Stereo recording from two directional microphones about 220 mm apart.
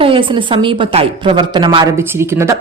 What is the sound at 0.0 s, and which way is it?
A woman's voice, 25° right (ahead or behind).